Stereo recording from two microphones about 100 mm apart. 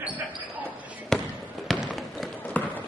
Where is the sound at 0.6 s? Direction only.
5° left (ahead or behind).